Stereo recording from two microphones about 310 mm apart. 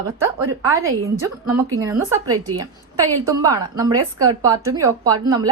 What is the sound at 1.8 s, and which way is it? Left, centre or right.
A woman's voice, centre.